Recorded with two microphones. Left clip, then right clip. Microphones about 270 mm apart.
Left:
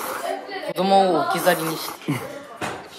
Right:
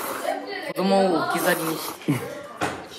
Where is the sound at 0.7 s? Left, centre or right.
Left.